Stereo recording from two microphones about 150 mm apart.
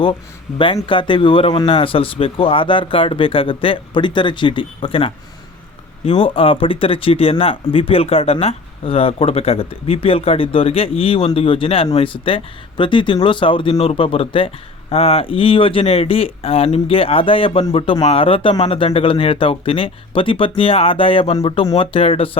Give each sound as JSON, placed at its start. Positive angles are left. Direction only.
{"t": 0.9, "sound": "speech", "side_deg": 35}